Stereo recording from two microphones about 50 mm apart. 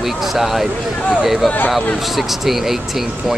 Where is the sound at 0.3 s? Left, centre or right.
Centre.